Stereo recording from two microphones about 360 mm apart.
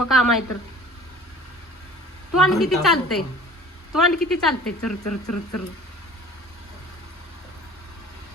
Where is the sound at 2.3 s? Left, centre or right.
Centre.